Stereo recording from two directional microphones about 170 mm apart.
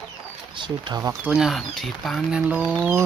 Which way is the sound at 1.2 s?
5° right (ahead or behind).